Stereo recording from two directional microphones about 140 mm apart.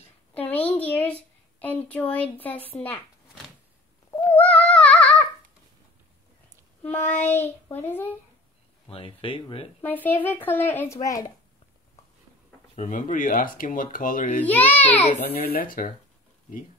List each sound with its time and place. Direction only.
0.3 s a sound: 10° left (ahead or behind)
1.6 s a woman's voice: 10° left (ahead or behind)
4.3 s child singing: 10° left (ahead or behind)
6.8 s child singing: 15° left (ahead or behind)
7.2 s a woman's voice: 15° left (ahead or behind)
8.8 s speech: 40° left (ahead or behind)
9.8 s a woman's voice: 15° left (ahead or behind)
12.7 s speech: 65° left (ahead or behind)
14.4 s a woman's voice: 10° left (ahead or behind)
15.0 s speech: 75° left (ahead or behind)